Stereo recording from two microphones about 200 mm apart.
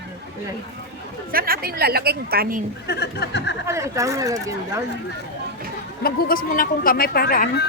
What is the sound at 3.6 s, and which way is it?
Speech, 15° right (ahead or behind).